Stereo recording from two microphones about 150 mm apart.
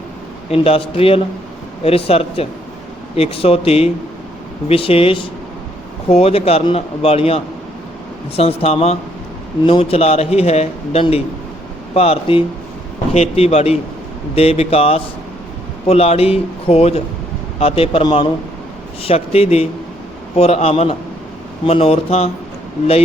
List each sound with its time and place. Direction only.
0.5 s a man's voice: 40° left (ahead or behind)